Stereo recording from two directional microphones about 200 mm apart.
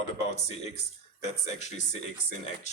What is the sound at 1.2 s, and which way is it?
Speech, 35° left (ahead or behind).